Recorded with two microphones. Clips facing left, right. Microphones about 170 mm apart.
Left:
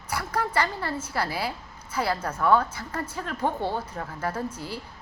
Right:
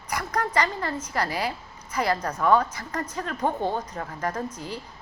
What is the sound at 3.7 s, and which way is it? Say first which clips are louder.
Speech: right 1 dB; 5° left (ahead or behind).